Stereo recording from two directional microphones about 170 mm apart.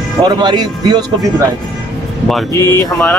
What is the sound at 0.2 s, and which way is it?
Speech, 25° right (ahead or behind).